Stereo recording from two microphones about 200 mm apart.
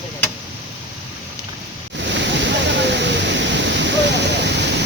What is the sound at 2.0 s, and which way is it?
Waterfall, 60° right (ahead or behind).